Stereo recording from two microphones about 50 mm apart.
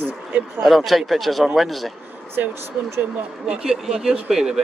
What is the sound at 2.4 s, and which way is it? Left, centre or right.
Speech, right.